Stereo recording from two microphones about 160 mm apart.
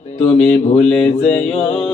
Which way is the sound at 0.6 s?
45° left (ahead or behind).